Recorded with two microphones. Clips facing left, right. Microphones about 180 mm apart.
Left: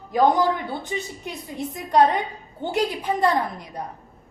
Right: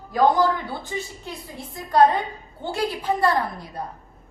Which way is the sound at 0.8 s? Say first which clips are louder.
Left 2 dB; 20° left (ahead or behind).